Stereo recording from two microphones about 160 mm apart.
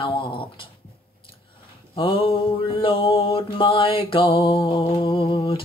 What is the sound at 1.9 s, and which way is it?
Mantra, 35° left (ahead or behind).